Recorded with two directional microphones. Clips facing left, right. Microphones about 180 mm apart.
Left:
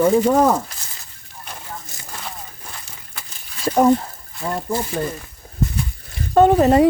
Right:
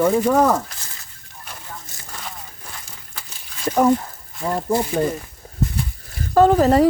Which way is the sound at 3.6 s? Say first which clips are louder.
Left 2 dB; 20° left (ahead or behind).